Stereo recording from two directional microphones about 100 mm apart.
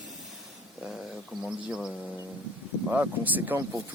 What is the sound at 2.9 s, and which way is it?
Speech, 15° right (ahead or behind).